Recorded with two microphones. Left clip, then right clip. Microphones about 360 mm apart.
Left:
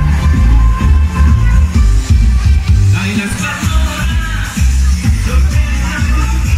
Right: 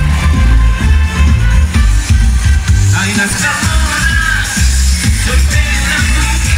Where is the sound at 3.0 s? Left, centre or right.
Centre.